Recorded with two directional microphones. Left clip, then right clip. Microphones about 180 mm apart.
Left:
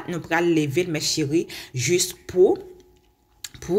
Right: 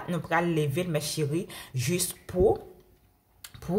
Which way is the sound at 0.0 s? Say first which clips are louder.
Left 5 dB; 10° left (ahead or behind).